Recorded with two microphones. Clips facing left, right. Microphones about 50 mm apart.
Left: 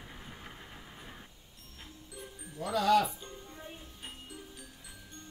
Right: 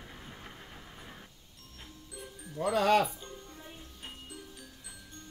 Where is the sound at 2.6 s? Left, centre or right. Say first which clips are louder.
Right 1 dB; right.